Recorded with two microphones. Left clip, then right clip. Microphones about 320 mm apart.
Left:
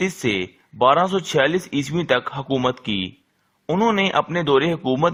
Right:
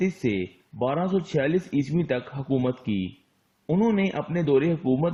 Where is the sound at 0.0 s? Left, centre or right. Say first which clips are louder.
Left 5 dB; left.